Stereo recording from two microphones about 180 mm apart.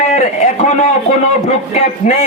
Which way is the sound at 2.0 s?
45° left (ahead or behind).